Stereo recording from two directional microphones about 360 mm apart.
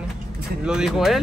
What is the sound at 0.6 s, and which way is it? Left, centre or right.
Speech, centre.